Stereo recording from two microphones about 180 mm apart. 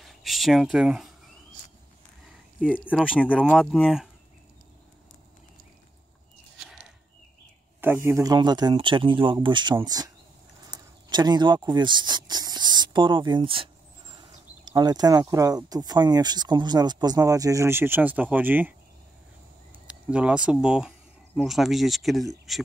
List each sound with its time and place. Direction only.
0.0 s speech: centre (ahead or behind)
2.7 s speech: 10° left (ahead or behind)
7.8 s speech: 15° right (ahead or behind)
19.7 s a sound: 5° right (ahead or behind)
20.6 s speech: 5° right (ahead or behind)